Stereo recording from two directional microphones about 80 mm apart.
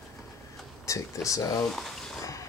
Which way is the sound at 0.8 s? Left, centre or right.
Left.